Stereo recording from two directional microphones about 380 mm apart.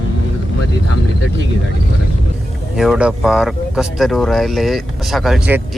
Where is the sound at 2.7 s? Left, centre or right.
Centre.